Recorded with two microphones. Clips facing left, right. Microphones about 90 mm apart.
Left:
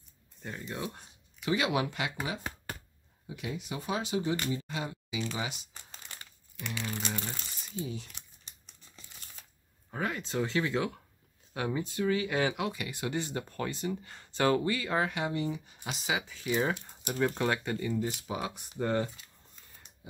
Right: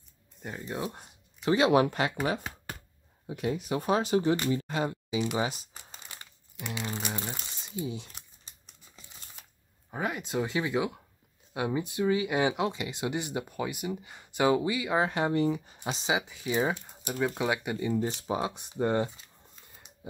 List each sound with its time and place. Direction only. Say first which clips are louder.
0.4 s speech: right 2 dB; 15° right (ahead or behind)
0.7 s speech: right 3 dB; 30° right (ahead or behind)
3.3 s speech: right 7 dB; 45° right (ahead or behind)
5.4 s speech: right 6 dB; 40° right (ahead or behind)
5.7 s crumpling: right 2 dB; 15° right (ahead or behind)
6.5 s speech: right 2 dB; 20° right (ahead or behind)
9.8 s speech: right 2 dB; 15° right (ahead or behind)
15.0 s speech: right 6 dB; 40° right (ahead or behind); by 19.2 s 20° right (ahead or behind)